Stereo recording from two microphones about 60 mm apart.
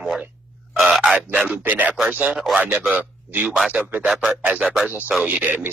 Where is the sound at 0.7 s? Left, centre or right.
Centre.